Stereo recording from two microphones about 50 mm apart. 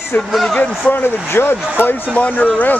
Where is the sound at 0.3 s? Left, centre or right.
Centre.